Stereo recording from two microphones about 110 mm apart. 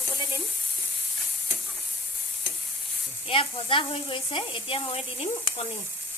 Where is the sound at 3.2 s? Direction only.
60° left (ahead or behind).